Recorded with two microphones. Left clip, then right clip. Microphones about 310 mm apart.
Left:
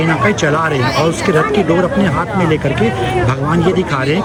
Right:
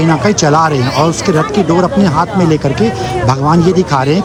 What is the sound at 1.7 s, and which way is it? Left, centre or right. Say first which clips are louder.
Speech: right 3 dB; centre.